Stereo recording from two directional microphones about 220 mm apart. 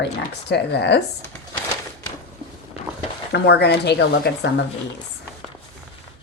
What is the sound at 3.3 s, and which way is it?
Speech, 50° left (ahead or behind).